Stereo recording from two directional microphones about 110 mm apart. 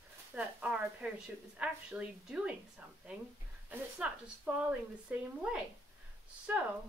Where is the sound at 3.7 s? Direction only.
15° right (ahead or behind).